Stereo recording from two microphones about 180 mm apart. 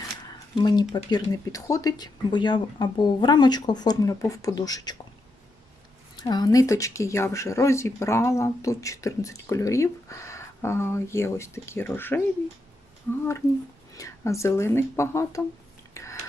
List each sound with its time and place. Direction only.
0.5 s speech: 25° left (ahead or behind)
6.1 s speech: 25° left (ahead or behind)
16.0 s a sound: 15° left (ahead or behind)